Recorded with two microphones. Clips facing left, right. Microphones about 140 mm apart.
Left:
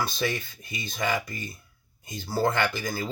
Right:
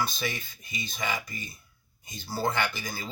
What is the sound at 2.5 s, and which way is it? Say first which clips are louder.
Speech: left 4 dB; 50° left (ahead or behind).